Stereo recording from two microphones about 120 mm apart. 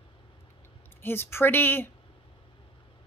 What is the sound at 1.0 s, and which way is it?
Speech, 20° left (ahead or behind).